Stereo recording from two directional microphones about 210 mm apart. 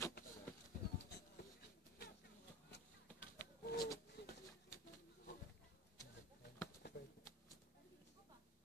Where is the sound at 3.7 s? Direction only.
20° left (ahead or behind).